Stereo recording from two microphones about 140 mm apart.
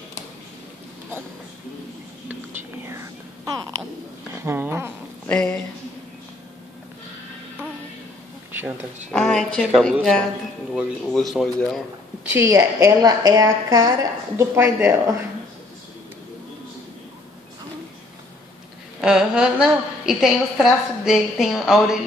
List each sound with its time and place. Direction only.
2.8 s a sound: 20° right (ahead or behind)
4.3 s speech: 20° right (ahead or behind)
5.2 s speech: 5° left (ahead or behind)
8.5 s a sound: 15° right (ahead or behind)
9.1 s a woman's voice: 5° left (ahead or behind)
10.7 s a woman's voice: centre (ahead or behind)
12.3 s a woman's voice: 20° right (ahead or behind)
18.9 s a woman's voice: 5° right (ahead or behind)